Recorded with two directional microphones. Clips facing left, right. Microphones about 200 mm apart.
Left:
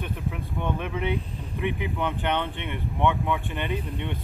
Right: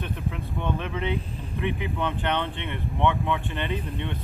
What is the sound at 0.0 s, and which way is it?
Speech, 10° left (ahead or behind).